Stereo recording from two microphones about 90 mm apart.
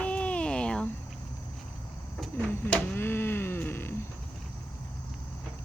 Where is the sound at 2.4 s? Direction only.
20° left (ahead or behind).